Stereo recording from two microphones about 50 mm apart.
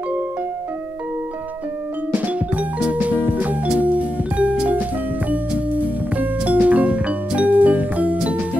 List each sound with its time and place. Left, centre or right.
2.1 s music: right